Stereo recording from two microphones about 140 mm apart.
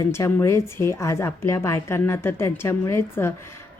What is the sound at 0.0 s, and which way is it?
A woman's voice, 20° left (ahead or behind).